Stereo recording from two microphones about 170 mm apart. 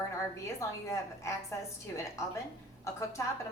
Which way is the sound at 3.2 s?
15° left (ahead or behind).